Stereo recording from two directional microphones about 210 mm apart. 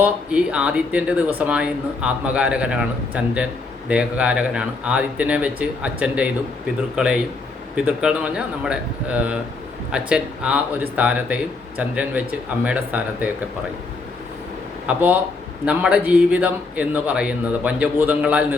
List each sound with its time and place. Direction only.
0.0 s speech: 5° right (ahead or behind)
14.8 s speech: 5° right (ahead or behind)